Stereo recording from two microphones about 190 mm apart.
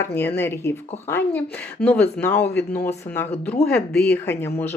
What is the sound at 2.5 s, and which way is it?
Speech, 60° left (ahead or behind).